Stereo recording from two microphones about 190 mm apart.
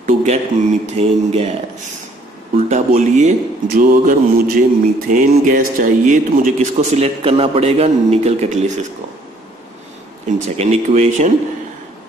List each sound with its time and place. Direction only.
0.0 s a sound: 40° right (ahead or behind)
0.9 s speech: 35° right (ahead or behind)
2.5 s speech: 45° right (ahead or behind)
10.2 s speech: 35° right (ahead or behind)